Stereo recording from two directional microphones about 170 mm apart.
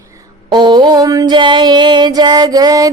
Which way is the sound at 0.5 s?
25° right (ahead or behind).